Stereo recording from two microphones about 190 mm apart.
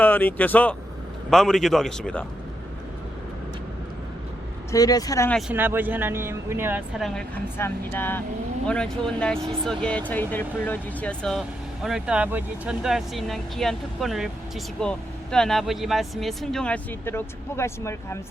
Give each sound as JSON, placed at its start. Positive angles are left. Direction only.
{"t": 0.0, "sound": "speech", "side_deg": 10}
{"t": 4.7, "sound": "speech", "side_deg": 20}
{"t": 5.5, "sound": "speech", "side_deg": -10}